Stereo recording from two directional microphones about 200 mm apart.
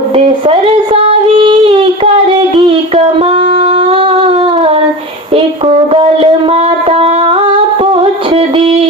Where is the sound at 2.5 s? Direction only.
30° right (ahead or behind).